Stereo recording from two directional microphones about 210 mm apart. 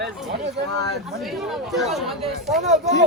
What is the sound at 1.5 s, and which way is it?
Speech, centre (ahead or behind).